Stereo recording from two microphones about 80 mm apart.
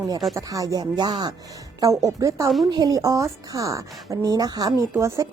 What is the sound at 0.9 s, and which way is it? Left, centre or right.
Speech, right.